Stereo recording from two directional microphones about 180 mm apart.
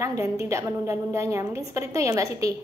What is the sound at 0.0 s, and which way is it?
A woman's voice, 15° right (ahead or behind).